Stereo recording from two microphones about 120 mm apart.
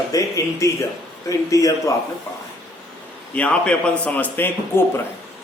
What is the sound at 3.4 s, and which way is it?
A man's voice, 10° left (ahead or behind).